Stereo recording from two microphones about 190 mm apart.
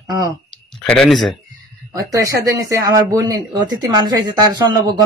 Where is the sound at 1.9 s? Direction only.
20° right (ahead or behind).